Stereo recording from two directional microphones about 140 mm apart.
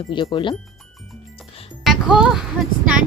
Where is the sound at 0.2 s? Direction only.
35° left (ahead or behind).